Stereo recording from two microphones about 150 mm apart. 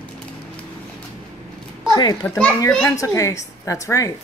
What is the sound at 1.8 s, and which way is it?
Speech, 25° left (ahead or behind).